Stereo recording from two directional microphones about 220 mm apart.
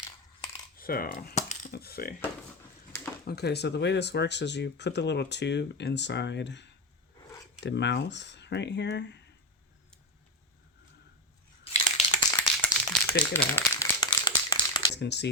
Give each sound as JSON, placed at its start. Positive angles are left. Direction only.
{"t": 0.8, "sound": "a sound", "side_deg": 40}
{"t": 1.7, "sound": "speech", "side_deg": 45}
{"t": 3.2, "sound": "speech", "side_deg": 45}
{"t": 11.6, "sound": "crushing", "side_deg": 30}
{"t": 12.3, "sound": "crumpling", "side_deg": 5}
{"t": 14.9, "sound": "speech", "side_deg": 50}